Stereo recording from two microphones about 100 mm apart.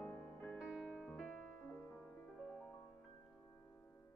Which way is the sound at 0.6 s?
5° right (ahead or behind).